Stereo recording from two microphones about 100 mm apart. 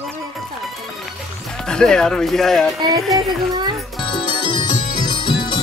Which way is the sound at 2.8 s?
45° right (ahead or behind).